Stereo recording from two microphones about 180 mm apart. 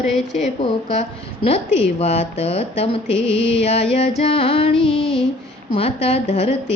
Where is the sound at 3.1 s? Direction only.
80° left.